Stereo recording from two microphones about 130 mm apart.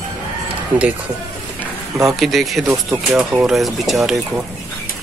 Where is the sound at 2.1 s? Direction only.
Centre (ahead or behind).